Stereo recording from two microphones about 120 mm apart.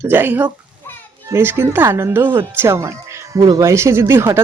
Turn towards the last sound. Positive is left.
turn(degrees=-20)  # may be behind; listen again after turning